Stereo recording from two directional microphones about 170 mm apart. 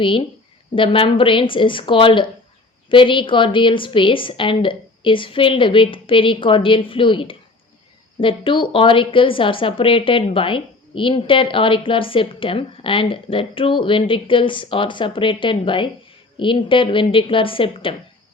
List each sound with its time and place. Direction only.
0.0 s a woman's voice: 30° left (ahead or behind)